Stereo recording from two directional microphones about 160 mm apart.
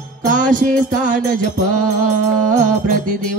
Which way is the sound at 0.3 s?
55° right (ahead or behind).